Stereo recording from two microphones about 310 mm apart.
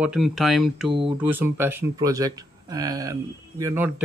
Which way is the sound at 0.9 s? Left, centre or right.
Centre.